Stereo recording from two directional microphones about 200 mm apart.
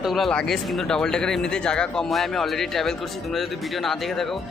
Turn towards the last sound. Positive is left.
turn(degrees=0)  # may be behind; listen again after turning